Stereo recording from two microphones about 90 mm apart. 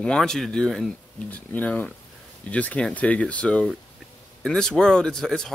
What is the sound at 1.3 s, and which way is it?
Speech, 15° left (ahead or behind).